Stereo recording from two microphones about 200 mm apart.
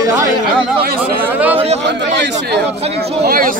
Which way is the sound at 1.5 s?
30° right (ahead or behind).